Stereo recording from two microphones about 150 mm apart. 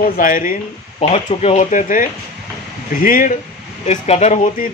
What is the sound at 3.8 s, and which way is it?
Speech, 45° left (ahead or behind).